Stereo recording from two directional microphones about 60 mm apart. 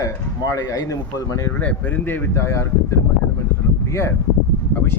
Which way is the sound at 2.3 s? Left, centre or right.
Left.